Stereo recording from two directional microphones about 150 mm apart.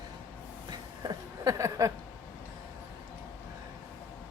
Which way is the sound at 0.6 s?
25° right (ahead or behind).